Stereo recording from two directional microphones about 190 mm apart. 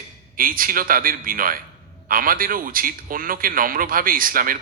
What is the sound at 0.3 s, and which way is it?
A man's voice, 50° right (ahead or behind).